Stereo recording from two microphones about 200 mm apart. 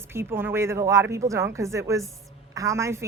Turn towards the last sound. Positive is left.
turn(degrees=-15)  # may be behind; listen again after turning